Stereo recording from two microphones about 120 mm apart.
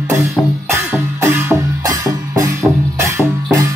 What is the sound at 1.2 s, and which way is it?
Music, 20° right (ahead or behind).